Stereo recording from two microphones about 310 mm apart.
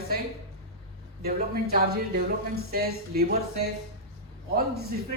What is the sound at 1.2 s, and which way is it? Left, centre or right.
Speech, right.